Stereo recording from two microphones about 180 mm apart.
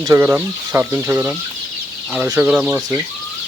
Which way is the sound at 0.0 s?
15° right (ahead or behind).